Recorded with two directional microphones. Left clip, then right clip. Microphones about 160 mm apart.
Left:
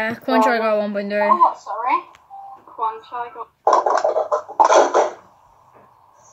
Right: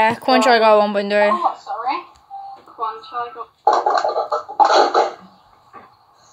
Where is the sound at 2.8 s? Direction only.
25° left (ahead or behind).